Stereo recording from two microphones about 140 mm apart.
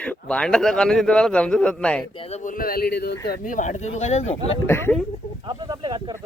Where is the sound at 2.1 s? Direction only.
40° left (ahead or behind).